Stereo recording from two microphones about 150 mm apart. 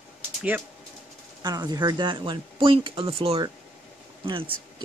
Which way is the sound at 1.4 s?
25° right (ahead or behind).